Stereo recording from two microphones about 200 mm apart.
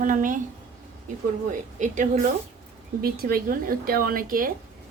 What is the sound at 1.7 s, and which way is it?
A woman's voice, 40° right (ahead or behind).